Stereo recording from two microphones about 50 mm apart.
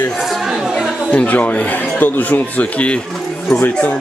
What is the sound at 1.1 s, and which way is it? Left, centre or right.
Speech, left.